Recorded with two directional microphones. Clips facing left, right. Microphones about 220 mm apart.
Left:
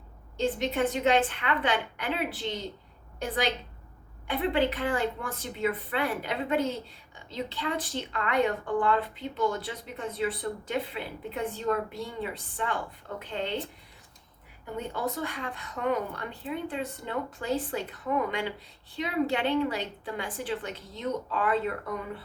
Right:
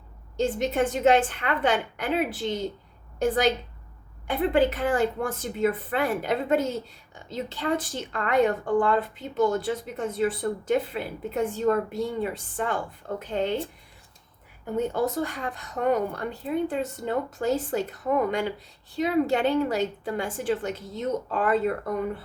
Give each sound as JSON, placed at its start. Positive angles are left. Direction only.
{"t": 0.3, "sound": "speech", "side_deg": -45}
{"t": 4.5, "sound": "speech", "side_deg": -45}
{"t": 14.8, "sound": "speech", "side_deg": -45}